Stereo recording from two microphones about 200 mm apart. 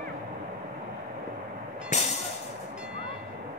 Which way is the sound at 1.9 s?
35° left (ahead or behind).